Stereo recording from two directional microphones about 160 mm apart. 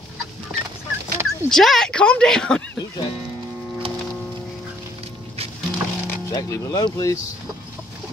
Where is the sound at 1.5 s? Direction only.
Centre (ahead or behind).